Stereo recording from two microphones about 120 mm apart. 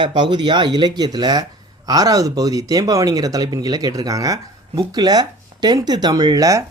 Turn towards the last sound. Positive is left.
turn(degrees=-30)  # may be behind; listen again after turning